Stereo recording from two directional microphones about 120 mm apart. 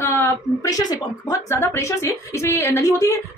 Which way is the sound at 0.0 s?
20° left (ahead or behind).